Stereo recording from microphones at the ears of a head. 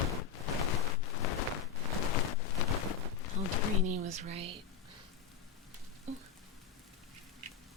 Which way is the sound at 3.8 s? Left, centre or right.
Right.